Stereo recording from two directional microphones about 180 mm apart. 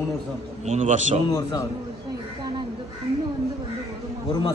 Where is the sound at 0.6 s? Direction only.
40° right (ahead or behind).